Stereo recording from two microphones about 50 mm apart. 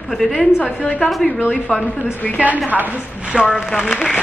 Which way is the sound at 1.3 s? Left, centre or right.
Left.